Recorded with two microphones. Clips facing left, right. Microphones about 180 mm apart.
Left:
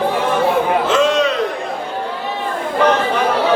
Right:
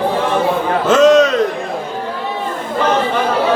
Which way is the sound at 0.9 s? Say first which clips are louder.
Right 6 dB; 45° right (ahead or behind).